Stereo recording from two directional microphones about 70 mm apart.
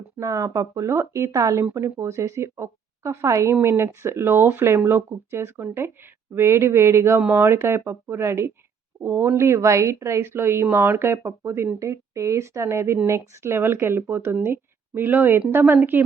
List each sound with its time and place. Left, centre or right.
0.2 s a woman's voice: right